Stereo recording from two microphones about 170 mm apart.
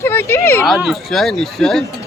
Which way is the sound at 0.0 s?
15° left (ahead or behind).